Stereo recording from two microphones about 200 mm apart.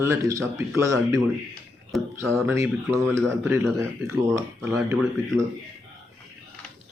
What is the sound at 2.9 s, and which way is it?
Speech, 10° right (ahead or behind).